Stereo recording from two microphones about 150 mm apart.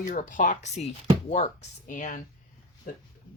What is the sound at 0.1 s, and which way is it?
Speech, 60° left (ahead or behind).